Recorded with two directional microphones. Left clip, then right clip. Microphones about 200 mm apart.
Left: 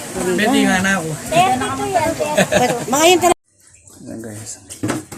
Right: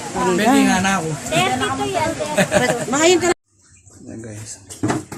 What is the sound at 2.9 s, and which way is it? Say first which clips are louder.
Speech: left 3 dB; 10° right (ahead or behind).